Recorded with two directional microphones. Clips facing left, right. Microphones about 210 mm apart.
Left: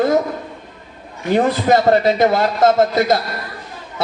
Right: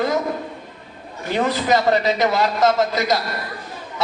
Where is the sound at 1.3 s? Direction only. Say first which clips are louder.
Left 4 dB; 45° left (ahead or behind).